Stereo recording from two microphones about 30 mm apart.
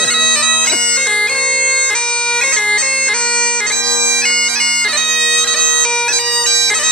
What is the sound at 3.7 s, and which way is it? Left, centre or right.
Bagpipes, centre.